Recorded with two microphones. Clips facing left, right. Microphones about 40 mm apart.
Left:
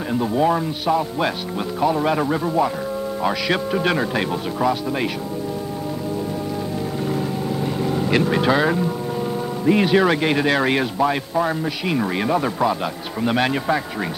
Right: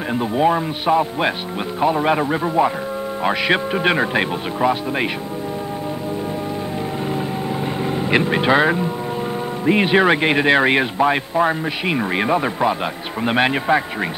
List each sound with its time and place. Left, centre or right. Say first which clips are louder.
0.1 s a man's voice: right 1 dB; right
7.8 s a man's voice: right 1 dB; right